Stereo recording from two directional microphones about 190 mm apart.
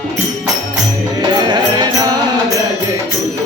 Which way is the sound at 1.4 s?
25° right (ahead or behind).